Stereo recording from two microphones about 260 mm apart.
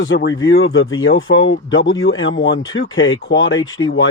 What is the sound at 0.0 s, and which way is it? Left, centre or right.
Speech, left.